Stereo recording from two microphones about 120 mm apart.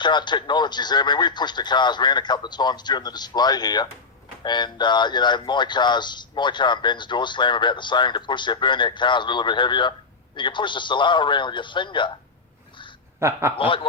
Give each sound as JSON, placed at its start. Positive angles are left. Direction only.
{"t": 0.0, "sound": "a man's voice", "side_deg": 40}
{"t": 13.1, "sound": "a man's voice", "side_deg": -20}
{"t": 13.6, "sound": "snicker", "side_deg": 45}